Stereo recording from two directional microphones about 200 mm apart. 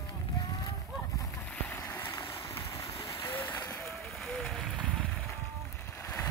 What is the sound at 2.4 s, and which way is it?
Vehicle, 15° left (ahead or behind).